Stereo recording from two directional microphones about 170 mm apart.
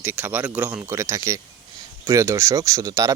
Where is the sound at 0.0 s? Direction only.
10° right (ahead or behind).